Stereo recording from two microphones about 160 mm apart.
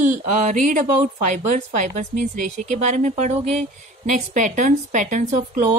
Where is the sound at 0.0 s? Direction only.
50° right (ahead or behind).